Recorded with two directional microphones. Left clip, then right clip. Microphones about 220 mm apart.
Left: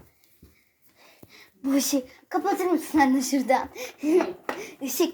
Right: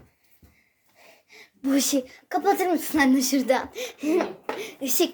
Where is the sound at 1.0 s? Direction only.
15° right (ahead or behind).